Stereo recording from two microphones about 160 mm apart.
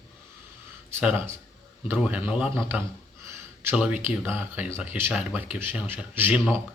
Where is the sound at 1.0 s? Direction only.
15° right (ahead or behind).